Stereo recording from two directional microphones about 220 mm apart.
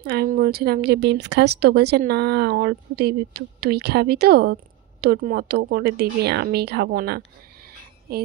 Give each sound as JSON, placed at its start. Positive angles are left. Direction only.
{"t": 0.0, "sound": "speech", "side_deg": -45}